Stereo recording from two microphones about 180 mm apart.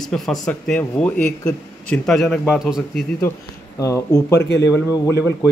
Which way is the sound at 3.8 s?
15° left (ahead or behind).